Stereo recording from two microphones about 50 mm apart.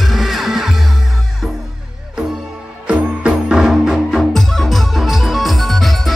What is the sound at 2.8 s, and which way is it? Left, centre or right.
Music, right.